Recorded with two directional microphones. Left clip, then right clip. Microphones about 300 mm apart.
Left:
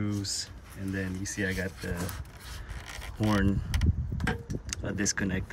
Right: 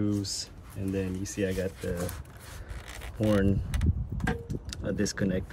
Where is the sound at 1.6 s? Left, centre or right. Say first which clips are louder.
Right 3 dB; right.